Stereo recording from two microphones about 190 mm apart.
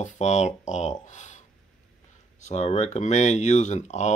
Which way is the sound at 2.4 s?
35° left (ahead or behind).